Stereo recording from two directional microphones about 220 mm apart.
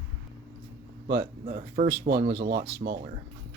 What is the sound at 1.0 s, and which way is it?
Speech, 40° right (ahead or behind).